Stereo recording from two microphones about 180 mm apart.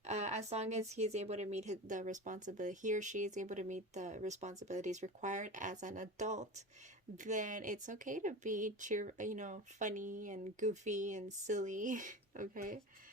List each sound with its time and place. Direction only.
0.0 s speech: 40° right (ahead or behind)